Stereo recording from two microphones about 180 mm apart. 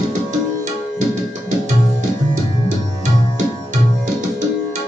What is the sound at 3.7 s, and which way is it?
Tabla, 45° right (ahead or behind).